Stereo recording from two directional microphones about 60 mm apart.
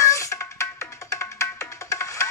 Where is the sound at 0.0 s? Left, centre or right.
Left.